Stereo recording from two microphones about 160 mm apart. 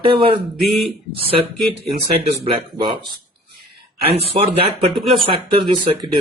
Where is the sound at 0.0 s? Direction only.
30° right (ahead or behind).